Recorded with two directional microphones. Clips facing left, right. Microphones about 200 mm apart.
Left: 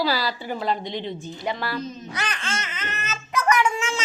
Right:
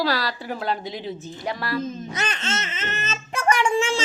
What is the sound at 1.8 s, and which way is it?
Speech, 50° right (ahead or behind).